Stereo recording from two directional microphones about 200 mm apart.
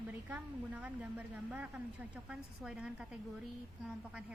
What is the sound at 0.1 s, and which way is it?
A woman's voice, 10° right (ahead or behind).